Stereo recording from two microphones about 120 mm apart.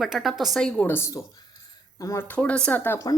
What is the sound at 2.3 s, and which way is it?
Speech, 10° left (ahead or behind).